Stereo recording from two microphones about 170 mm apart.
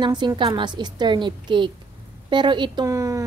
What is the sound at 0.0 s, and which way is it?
A woman's voice, 25° right (ahead or behind).